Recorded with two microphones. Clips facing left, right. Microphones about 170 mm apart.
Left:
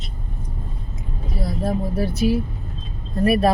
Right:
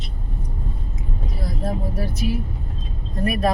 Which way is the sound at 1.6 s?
30° left (ahead or behind).